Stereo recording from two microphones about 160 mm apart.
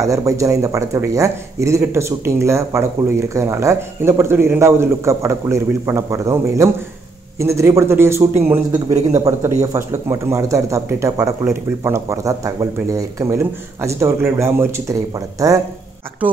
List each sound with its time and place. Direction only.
0.0 s a man's voice: 20° right (ahead or behind)